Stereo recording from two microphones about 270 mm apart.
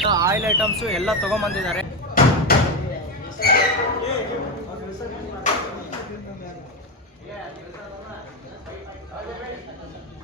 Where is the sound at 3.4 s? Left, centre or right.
Left.